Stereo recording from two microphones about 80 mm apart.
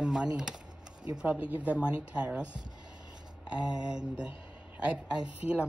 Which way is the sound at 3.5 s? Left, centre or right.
Centre.